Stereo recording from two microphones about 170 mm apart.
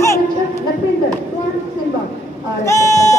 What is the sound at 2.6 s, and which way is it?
Speech, 15° left (ahead or behind).